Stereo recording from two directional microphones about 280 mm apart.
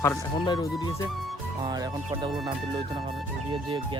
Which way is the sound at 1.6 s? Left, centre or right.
Centre.